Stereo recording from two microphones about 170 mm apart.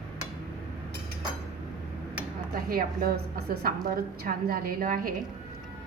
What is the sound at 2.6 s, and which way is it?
A woman's voice, 60° right (ahead or behind).